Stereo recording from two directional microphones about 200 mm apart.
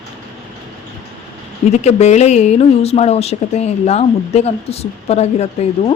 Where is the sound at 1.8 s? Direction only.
35° left (ahead or behind).